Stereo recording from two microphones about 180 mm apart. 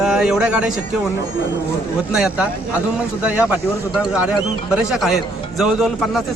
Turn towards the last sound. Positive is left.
turn(degrees=0)  # may be behind; listen again after turning